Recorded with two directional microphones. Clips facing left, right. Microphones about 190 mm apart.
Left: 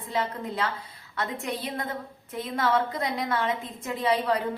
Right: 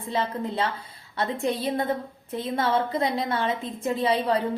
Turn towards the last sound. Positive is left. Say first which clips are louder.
# right 2 dB
turn(degrees=-30)  # may be behind; listen again after turning